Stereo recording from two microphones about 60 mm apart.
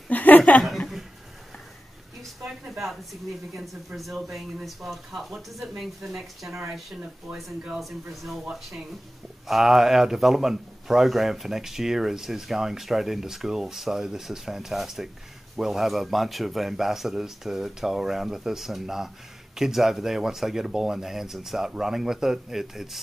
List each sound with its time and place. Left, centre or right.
0.1 s chuckle: left
2.7 s a man's voice: centre
7.8 s a man's voice: centre